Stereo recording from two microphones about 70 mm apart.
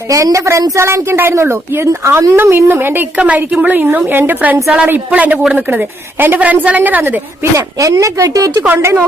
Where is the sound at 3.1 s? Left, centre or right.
Centre.